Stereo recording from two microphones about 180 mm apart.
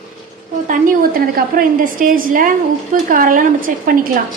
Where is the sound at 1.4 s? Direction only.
55° right (ahead or behind).